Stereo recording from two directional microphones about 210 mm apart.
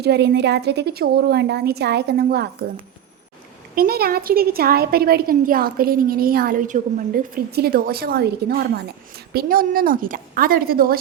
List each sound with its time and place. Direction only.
0.0 s a woman's voice: 50° right (ahead or behind)
3.8 s a woman's voice: 45° right (ahead or behind)